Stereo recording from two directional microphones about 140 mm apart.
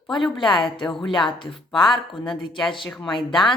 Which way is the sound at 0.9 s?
5° left (ahead or behind).